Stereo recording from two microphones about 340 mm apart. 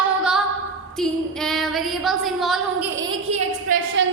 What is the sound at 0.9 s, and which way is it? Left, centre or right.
A woman's voice, centre.